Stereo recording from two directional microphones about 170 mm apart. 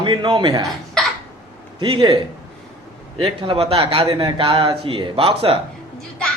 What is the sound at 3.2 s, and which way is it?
Speech, 35° right (ahead or behind).